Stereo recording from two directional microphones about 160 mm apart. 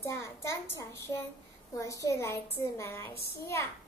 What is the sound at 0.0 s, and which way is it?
A child's voice, 15° left (ahead or behind).